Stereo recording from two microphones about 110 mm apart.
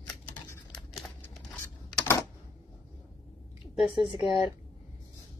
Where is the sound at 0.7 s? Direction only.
Centre (ahead or behind).